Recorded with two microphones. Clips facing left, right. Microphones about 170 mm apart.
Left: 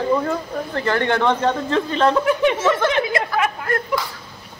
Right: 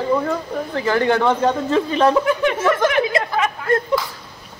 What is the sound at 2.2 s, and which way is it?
Speech, 15° left (ahead or behind).